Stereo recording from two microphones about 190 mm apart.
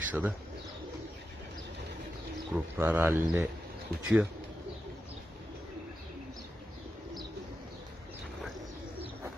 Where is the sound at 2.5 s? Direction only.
10° right (ahead or behind).